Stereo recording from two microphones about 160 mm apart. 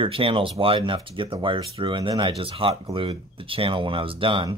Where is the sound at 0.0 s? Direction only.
35° right (ahead or behind).